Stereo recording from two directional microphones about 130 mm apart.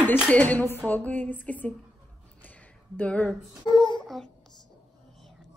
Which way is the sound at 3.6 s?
35° left (ahead or behind).